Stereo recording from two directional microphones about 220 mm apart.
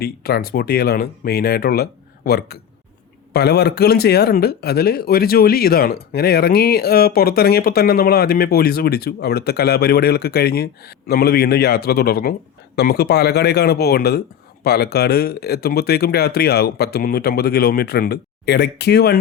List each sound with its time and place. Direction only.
0.0 s speech: 45° left (ahead or behind)